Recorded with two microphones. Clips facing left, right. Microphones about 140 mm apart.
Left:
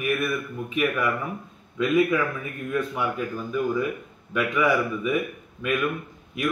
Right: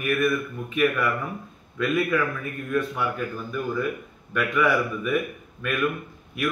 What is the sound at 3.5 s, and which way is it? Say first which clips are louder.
Speech: left 3 dB; centre (ahead or behind).